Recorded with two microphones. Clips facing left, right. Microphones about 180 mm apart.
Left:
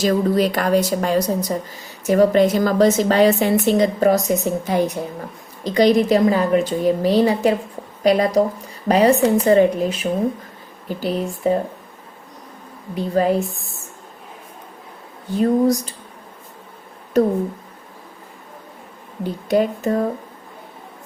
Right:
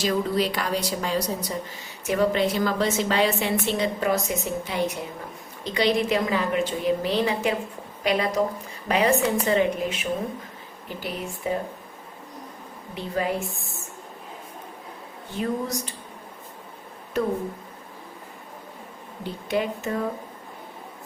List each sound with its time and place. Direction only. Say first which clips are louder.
0.0 s a woman's voice: left 6 dB; 45° left (ahead or behind)
13.2 s a woman's voice: left 8 dB; 40° left (ahead or behind)
15.4 s a woman's voice: left 11 dB; 35° left (ahead or behind)
17.2 s a woman's voice: left 9 dB; 40° left (ahead or behind)
19.2 s a woman's voice: left 8 dB; 40° left (ahead or behind)